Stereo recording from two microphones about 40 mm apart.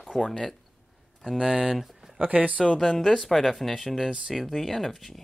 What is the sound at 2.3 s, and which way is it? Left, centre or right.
Speech, right.